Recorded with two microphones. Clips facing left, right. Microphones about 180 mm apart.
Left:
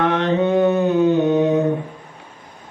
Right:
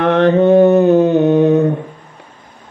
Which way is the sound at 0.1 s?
55° right (ahead or behind).